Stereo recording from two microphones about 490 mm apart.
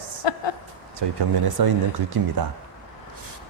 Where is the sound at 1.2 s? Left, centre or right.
Right.